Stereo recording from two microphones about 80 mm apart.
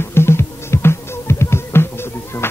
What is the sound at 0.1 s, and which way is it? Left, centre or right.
Music, left.